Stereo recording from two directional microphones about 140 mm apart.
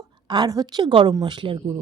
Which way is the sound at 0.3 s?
30° right (ahead or behind).